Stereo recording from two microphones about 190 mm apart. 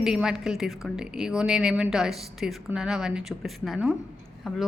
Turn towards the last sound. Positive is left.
turn(degrees=0)  # may be behind; listen again after turning